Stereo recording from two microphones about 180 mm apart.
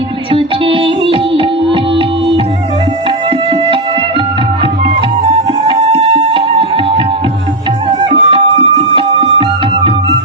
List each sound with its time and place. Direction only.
0.3 s music: 30° right (ahead or behind)
5.2 s music: 30° right (ahead or behind)